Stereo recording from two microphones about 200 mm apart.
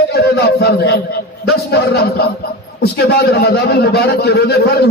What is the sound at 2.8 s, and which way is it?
A man's voice, 55° left (ahead or behind).